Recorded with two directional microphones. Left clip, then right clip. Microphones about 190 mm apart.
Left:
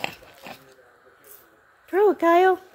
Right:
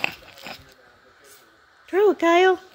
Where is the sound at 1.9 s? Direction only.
5° right (ahead or behind).